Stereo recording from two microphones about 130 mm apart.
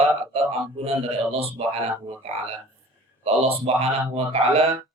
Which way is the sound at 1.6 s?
50° right (ahead or behind).